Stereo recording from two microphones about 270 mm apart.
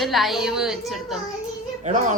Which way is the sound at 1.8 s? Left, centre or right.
Right.